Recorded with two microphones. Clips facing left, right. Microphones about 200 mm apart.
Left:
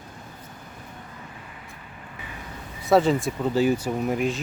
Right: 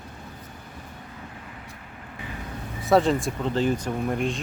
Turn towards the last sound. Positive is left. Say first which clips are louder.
# left 2 dB
turn(degrees=5)  # may be behind; listen again after turning